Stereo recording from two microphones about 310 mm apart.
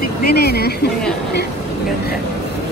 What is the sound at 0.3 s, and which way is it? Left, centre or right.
Speech, left.